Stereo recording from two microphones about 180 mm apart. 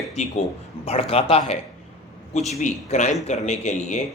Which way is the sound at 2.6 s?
40° left (ahead or behind).